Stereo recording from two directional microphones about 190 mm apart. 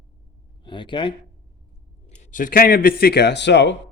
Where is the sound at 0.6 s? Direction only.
25° left (ahead or behind).